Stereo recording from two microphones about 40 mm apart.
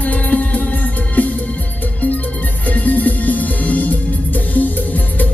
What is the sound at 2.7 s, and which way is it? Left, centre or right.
Music, left.